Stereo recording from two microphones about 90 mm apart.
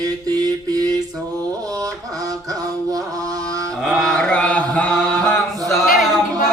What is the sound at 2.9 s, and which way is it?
Mantra, 40° right (ahead or behind).